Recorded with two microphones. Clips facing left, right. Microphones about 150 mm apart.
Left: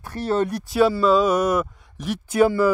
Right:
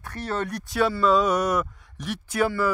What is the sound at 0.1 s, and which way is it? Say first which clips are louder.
Speech: left 7 dB; 30° left (ahead or behind).